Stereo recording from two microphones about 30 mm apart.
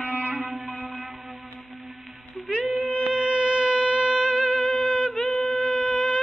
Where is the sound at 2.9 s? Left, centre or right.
Right.